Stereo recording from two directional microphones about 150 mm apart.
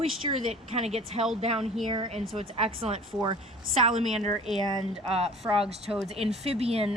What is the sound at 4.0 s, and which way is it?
Speech, 45° right (ahead or behind).